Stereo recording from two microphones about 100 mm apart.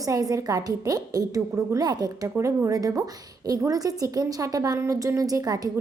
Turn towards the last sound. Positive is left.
turn(degrees=-40)  # may be behind; listen again after turning